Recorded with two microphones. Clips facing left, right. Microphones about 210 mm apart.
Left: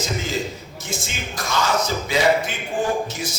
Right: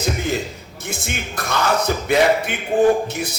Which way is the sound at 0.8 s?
60° right (ahead or behind).